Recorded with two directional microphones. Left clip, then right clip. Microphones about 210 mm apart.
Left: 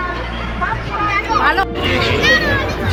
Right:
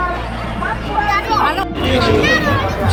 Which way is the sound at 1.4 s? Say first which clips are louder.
Left 2 dB; 5° right (ahead or behind).